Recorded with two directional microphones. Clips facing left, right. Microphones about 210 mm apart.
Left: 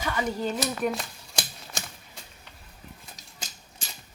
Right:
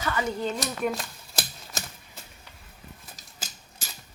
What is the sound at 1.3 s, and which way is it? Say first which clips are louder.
Typewriter: right 1 dB; 5° right (ahead or behind).